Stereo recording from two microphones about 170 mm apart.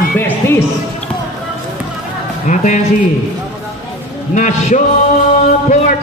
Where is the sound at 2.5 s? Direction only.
45° left (ahead or behind).